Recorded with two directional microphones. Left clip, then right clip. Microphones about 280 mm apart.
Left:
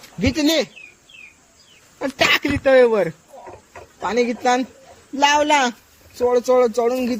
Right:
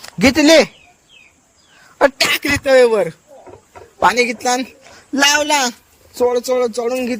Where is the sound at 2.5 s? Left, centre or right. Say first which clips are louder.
Right 4 dB; right.